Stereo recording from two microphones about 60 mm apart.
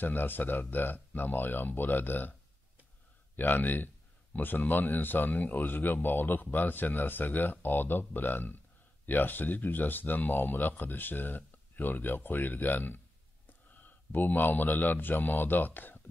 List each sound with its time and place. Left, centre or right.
0.0 s speech: left
3.3 s a man's voice: left